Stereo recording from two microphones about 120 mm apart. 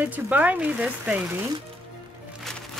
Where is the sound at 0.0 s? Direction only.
15° right (ahead or behind).